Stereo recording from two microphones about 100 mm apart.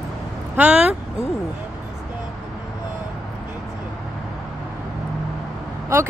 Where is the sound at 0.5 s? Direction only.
15° right (ahead or behind).